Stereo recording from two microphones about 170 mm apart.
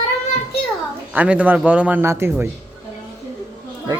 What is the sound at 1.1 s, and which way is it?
A man's voice, 10° right (ahead or behind).